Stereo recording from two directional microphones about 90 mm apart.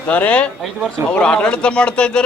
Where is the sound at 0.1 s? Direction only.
20° left (ahead or behind).